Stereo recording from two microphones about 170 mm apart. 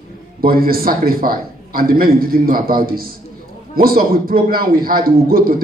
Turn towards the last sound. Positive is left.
turn(degrees=-60)  # may be behind; listen again after turning